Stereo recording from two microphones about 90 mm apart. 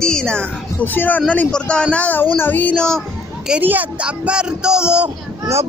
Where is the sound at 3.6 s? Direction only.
20° right (ahead or behind).